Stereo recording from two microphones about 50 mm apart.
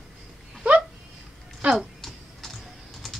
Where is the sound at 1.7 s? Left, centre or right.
Centre.